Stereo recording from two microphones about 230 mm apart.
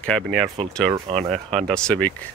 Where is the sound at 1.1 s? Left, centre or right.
Right.